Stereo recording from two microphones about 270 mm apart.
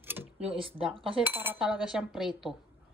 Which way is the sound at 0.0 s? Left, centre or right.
Centre.